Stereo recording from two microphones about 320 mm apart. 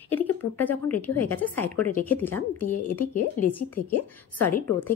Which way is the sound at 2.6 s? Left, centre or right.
Left.